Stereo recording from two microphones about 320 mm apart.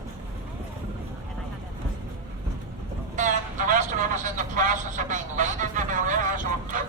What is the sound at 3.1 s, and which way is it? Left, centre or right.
Vehicle, right.